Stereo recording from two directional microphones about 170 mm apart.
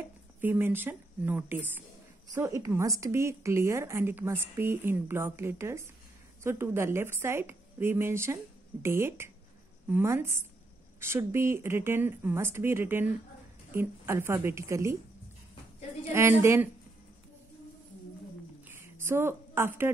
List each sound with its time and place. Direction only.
0.4 s a woman's voice: 10° right (ahead or behind)
16.1 s a woman's voice: 15° right (ahead or behind)
18.7 s a sound: 15° right (ahead or behind)